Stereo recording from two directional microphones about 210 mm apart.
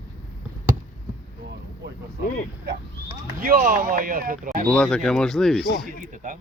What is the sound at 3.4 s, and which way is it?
Speech, 40° right (ahead or behind).